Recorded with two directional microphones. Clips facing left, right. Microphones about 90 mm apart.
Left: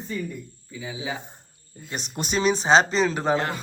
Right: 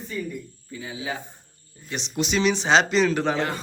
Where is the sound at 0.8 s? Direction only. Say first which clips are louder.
Even; 15° left (ahead or behind).